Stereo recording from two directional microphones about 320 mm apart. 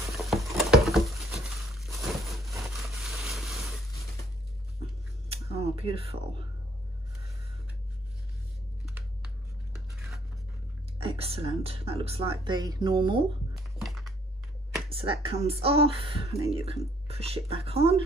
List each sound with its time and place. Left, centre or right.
0.1 s patter: centre
5.3 s a sound: centre
8.8 s computer keyboard: centre
11.0 s speech: centre
13.8 s computer keyboard: centre
14.9 s speech: centre